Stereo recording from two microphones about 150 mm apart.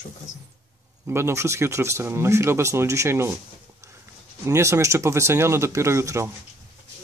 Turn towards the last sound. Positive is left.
turn(degrees=-20)  # may be behind; listen again after turning